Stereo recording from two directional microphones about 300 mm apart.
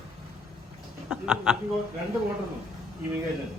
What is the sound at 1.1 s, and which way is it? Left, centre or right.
Speech, centre.